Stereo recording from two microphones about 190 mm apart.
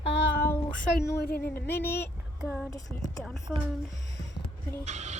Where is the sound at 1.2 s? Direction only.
55° left (ahead or behind).